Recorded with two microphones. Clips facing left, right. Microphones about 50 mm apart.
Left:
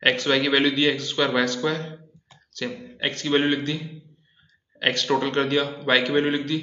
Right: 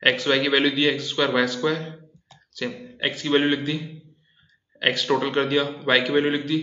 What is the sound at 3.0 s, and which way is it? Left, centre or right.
A man's voice, centre.